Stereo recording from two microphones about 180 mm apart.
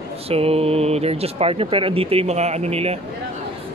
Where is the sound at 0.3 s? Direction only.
35° right (ahead or behind).